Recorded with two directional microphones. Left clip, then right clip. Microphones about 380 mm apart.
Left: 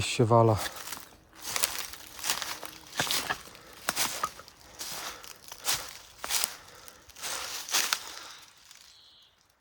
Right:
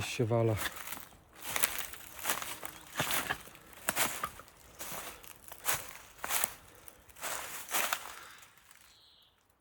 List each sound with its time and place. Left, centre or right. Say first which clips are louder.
0.0 s speech: left 9 dB; centre
0.8 s walk: left 3 dB; centre
3.8 s a sound: left 3 dB; centre